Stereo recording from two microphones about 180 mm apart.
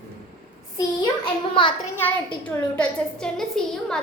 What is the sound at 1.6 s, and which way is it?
Speech, 30° left (ahead or behind).